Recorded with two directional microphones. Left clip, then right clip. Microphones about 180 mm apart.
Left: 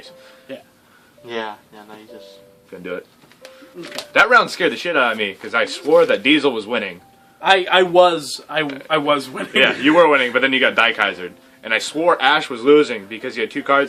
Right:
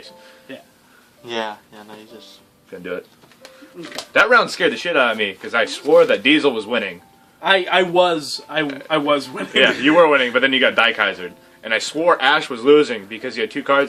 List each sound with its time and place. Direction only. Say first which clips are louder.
1.3 s speech: right 2 dB; 50° right (ahead or behind)
2.7 s a man's voice: right 1 dB; 10° left (ahead or behind)
7.4 s a man's voice: left 2 dB; 35° left (ahead or behind)
8.6 s a man's voice: right 1 dB; 15° left (ahead or behind)
8.9 s a man's voice: left 1 dB; 35° left (ahead or behind)
9.6 s a man's voice: even; 15° left (ahead or behind)